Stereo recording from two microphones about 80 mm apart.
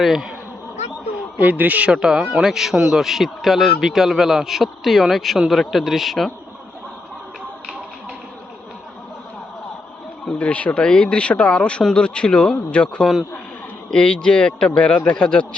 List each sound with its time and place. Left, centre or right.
0.0 s speech: centre
1.4 s a man's voice: right
1.9 s speech: centre
10.2 s speech: centre